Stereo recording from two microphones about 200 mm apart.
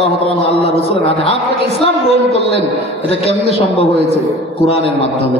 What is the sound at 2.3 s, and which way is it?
Mantra, 30° left (ahead or behind).